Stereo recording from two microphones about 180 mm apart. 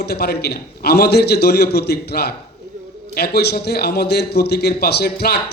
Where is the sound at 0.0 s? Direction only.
65° left (ahead or behind).